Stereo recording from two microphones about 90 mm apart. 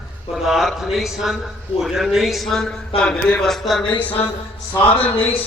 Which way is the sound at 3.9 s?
15° left (ahead or behind).